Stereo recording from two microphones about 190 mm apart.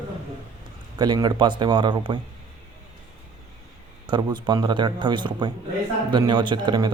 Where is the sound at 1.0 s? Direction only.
20° right (ahead or behind).